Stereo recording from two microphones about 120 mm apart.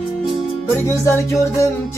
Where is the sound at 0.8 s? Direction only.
25° left (ahead or behind).